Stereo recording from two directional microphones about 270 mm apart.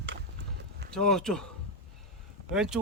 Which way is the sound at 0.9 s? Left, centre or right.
Centre.